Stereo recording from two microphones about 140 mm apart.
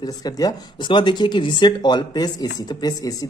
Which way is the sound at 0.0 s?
30° left (ahead or behind).